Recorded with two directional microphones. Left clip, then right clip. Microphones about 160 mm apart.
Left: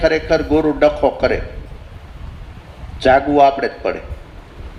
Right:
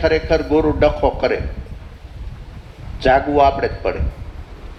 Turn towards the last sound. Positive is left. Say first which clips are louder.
# left 2 dB
turn(degrees=40)  # may be behind; listen again after turning